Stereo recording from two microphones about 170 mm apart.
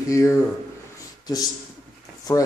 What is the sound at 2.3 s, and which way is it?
Speech, 20° left (ahead or behind).